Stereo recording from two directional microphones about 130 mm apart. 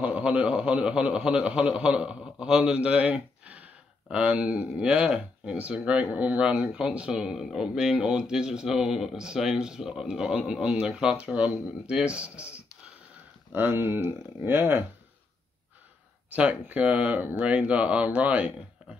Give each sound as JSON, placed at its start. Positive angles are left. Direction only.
{"t": 0.0, "sound": "speech", "side_deg": -10}
{"t": 16.3, "sound": "speech", "side_deg": -10}